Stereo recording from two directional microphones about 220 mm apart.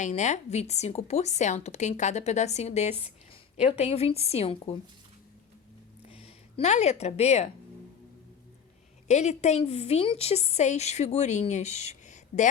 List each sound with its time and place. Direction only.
0.0 s a woman's voice: 30° left (ahead or behind)
6.1 s speech: 25° left (ahead or behind)
9.0 s a woman's voice: 30° left (ahead or behind)